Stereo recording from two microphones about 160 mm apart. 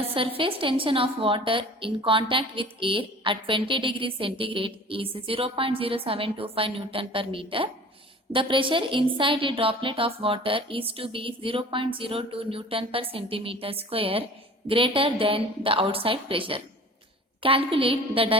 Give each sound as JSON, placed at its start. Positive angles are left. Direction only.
{"t": 0.0, "sound": "a woman's voice", "side_deg": -35}